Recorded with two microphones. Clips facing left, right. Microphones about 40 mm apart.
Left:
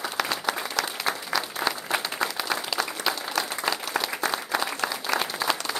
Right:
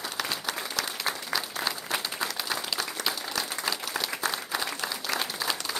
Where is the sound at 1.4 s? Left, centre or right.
Centre.